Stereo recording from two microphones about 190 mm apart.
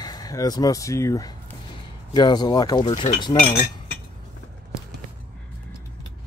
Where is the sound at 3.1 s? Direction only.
40° left (ahead or behind).